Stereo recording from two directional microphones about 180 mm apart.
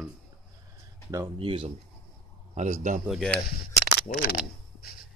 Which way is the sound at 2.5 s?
45° right (ahead or behind).